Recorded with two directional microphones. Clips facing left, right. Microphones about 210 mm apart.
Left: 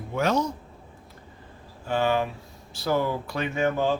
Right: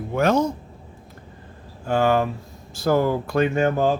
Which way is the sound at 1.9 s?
50° right (ahead or behind).